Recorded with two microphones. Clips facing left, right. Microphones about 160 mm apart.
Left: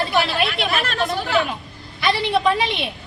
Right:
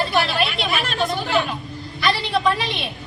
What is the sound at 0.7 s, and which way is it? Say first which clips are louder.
Chatter: even; centre (ahead or behind).